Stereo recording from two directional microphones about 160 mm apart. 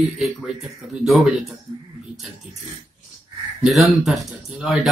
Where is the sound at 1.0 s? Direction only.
Centre (ahead or behind).